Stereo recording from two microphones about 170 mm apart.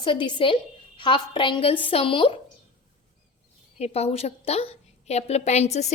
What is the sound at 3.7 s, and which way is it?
A woman's voice, 40° left (ahead or behind).